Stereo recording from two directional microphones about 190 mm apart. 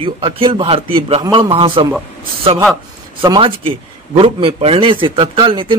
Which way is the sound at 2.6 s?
5° right (ahead or behind).